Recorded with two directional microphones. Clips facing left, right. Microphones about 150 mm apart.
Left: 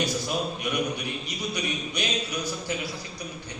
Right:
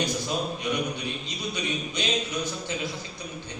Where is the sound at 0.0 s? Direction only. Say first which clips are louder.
Even; 20° right (ahead or behind).